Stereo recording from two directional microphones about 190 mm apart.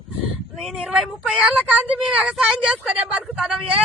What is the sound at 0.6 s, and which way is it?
Speech, centre (ahead or behind).